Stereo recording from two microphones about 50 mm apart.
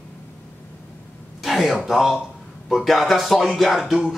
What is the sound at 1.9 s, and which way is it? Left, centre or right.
A man's voice, centre.